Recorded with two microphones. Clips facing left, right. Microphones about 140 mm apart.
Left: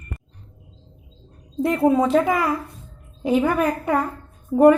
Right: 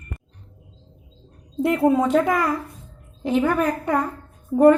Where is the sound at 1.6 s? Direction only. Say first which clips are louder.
Even; 5° right (ahead or behind).